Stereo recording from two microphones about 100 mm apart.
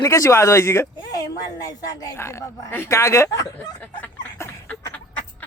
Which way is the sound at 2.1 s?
30° left (ahead or behind).